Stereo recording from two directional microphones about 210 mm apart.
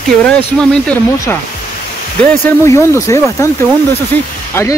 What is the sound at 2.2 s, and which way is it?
Speech, 15° left (ahead or behind).